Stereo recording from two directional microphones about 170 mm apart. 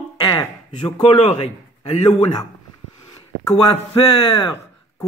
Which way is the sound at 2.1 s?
25° left (ahead or behind).